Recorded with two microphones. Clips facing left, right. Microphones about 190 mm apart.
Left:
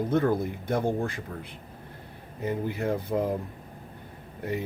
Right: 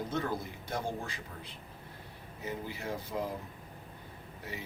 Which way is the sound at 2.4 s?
55° left (ahead or behind).